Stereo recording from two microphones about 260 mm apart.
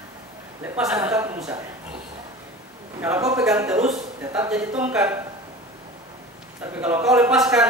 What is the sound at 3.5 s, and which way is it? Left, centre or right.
Speech, centre.